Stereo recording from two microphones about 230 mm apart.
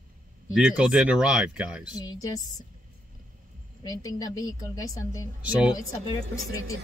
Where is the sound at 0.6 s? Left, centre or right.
Centre.